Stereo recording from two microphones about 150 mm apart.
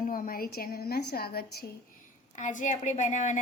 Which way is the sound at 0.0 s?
70° left (ahead or behind).